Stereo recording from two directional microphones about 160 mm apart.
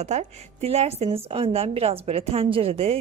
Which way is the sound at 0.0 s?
45° right (ahead or behind).